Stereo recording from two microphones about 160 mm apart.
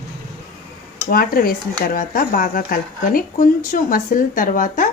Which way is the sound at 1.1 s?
65° left (ahead or behind).